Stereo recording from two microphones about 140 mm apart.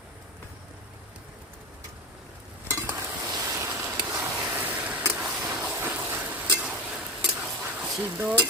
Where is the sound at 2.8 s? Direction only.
20° right (ahead or behind).